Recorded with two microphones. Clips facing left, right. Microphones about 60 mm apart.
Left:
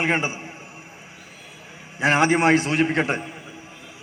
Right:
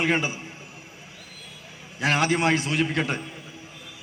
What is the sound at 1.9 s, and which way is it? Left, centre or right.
A man's voice, left.